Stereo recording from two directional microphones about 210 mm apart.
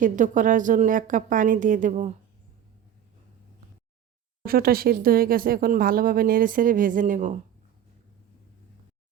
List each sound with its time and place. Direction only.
0.0 s a woman's voice: 40° right (ahead or behind)
4.4 s speech: 45° right (ahead or behind)